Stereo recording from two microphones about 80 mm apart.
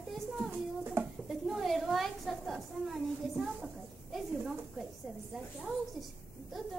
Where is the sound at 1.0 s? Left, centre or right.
Right.